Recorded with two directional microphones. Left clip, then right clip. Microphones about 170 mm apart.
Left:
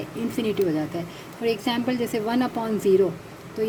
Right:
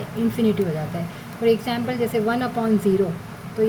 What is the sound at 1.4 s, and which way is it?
A woman's voice, 50° left (ahead or behind).